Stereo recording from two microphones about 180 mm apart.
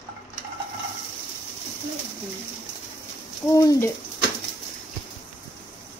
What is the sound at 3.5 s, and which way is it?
Speech, 15° left (ahead or behind).